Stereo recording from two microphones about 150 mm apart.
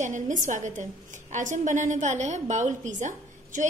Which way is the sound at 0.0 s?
55° right (ahead or behind).